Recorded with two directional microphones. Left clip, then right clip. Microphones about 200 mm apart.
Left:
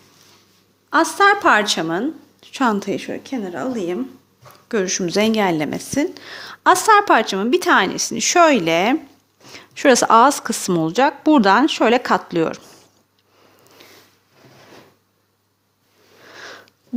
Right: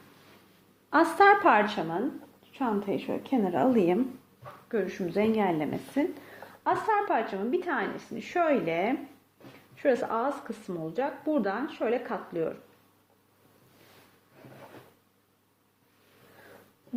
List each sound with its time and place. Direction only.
0.9 s a woman's voice: 20° left (ahead or behind)
1.5 s a woman's voice: 45° left (ahead or behind)
2.4 s a woman's voice: 60° left (ahead or behind)
2.9 s a woman's voice: 35° left (ahead or behind)
3.2 s a woman's voice: centre (ahead or behind)
4.7 s a woman's voice: 55° left (ahead or behind)